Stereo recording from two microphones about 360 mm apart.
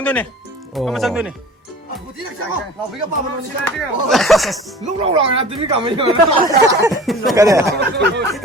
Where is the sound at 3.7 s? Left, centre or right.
Centre.